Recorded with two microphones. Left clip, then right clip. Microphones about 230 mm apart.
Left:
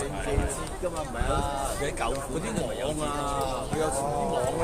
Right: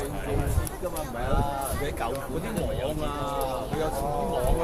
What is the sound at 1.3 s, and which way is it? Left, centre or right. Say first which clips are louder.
Speech: even; left.